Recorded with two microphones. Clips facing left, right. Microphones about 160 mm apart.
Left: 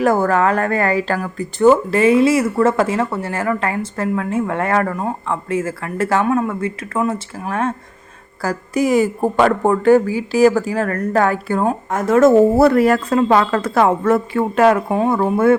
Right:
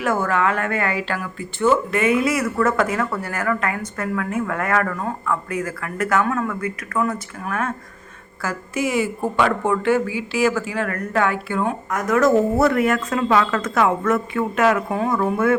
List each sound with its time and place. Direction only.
0.0 s a woman's voice: 40° left (ahead or behind)
11.9 s a woman's voice: 30° left (ahead or behind)